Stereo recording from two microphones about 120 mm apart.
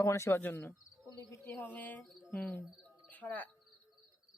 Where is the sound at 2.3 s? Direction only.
15° left (ahead or behind).